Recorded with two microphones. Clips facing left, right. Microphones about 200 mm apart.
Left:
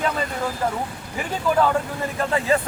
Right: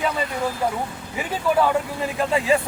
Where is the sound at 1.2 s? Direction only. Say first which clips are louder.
Even; 5° right (ahead or behind).